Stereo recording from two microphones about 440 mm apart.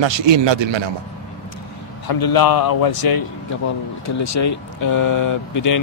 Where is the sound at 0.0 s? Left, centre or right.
Right.